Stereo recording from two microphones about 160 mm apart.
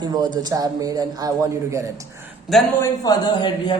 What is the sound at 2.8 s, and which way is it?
Speech, 25° left (ahead or behind).